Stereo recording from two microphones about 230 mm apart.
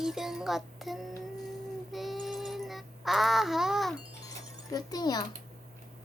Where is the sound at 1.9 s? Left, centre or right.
Centre.